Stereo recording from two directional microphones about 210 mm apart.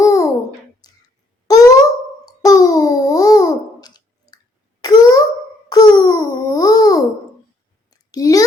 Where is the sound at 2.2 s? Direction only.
15° left (ahead or behind).